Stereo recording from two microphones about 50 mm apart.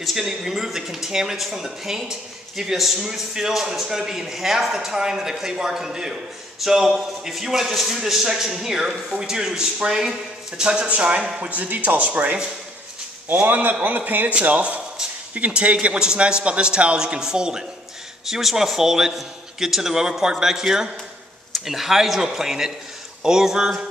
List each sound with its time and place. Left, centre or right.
0.0 s a man's voice: centre; by 12.4 s right
13.4 s a man's voice: right; by 23.9 s centre